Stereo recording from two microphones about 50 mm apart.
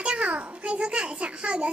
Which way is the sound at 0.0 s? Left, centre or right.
Right.